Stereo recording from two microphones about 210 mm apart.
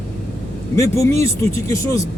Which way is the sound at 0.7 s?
15° left (ahead or behind).